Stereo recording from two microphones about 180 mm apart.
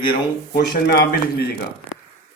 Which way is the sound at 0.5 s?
60° left (ahead or behind).